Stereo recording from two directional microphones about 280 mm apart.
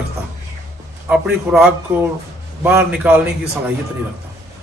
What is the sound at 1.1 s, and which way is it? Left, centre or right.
A man's voice, centre.